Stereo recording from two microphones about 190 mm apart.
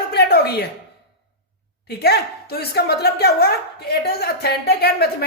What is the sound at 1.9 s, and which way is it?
A woman's voice, 60° left (ahead or behind).